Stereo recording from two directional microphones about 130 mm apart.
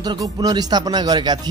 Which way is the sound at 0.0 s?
30° right (ahead or behind).